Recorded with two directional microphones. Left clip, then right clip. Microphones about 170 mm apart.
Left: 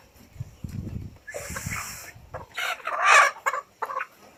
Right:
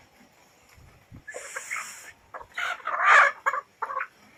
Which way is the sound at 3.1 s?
15° left (ahead or behind).